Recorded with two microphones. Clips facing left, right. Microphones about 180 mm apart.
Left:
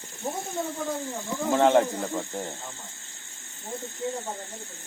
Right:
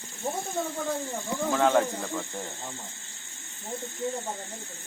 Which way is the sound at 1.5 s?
20° left (ahead or behind).